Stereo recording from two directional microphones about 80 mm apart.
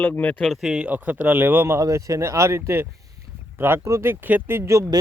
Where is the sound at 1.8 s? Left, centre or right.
Right.